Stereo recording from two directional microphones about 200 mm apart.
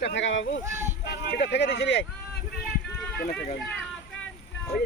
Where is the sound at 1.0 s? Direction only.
55° left (ahead or behind).